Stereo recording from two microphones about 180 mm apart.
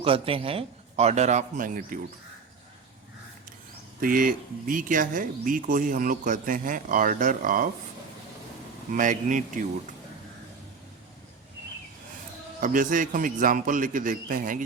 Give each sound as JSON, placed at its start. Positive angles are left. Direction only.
{"t": 0.0, "sound": "speech", "side_deg": -30}
{"t": 4.0, "sound": "speech", "side_deg": -50}
{"t": 8.9, "sound": "speech", "side_deg": -45}
{"t": 12.5, "sound": "speech", "side_deg": -45}